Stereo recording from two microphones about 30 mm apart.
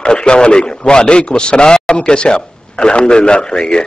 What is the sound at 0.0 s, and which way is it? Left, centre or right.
A man's voice, left.